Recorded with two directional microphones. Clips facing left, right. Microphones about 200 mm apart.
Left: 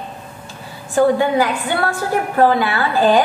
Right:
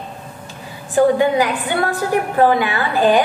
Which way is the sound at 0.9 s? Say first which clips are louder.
Right 1 dB; 15° right (ahead or behind).